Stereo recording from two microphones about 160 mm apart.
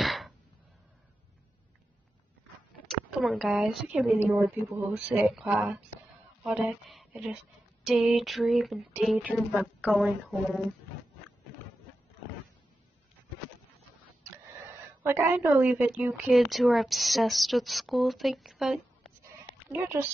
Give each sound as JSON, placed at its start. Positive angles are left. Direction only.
{"t": 0.0, "sound": "a sound", "side_deg": 0}
{"t": 3.1, "sound": "a woman's voice", "side_deg": 0}
{"t": 5.0, "sound": "a woman's voice", "side_deg": 0}
{"t": 15.0, "sound": "a woman's voice", "side_deg": -15}
{"t": 19.7, "sound": "a woman's voice", "side_deg": -15}